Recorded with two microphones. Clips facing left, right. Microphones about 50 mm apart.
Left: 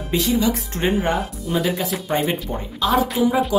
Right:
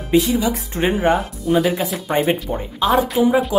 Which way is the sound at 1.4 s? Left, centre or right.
Centre.